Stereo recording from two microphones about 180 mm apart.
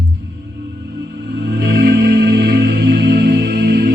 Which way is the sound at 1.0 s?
70° right (ahead or behind).